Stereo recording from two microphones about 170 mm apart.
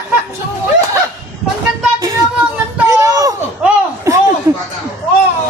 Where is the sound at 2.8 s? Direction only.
20° right (ahead or behind).